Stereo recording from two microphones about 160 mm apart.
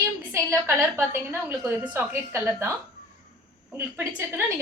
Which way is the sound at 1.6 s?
5° right (ahead or behind).